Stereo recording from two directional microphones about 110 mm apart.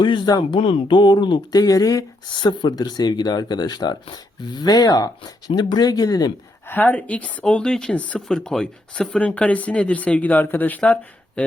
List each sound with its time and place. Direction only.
0.0 s speech: 45° left (ahead or behind)
2.3 s speech: 45° left (ahead or behind)
6.7 s speech: 15° left (ahead or behind)